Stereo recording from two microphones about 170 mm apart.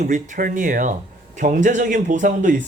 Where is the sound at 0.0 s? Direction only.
45° right (ahead or behind).